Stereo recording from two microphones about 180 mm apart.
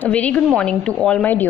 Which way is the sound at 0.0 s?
5° left (ahead or behind).